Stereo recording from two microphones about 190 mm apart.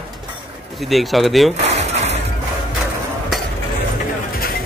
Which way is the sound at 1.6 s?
35° right (ahead or behind).